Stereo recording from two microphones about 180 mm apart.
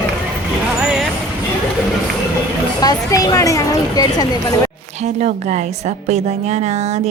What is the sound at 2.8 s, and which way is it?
Speech, 20° left (ahead or behind).